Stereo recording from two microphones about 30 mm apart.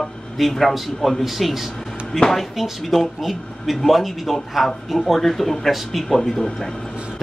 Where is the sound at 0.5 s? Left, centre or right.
Centre.